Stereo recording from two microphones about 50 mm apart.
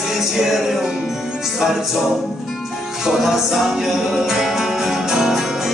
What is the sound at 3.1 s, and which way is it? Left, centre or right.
Music, centre.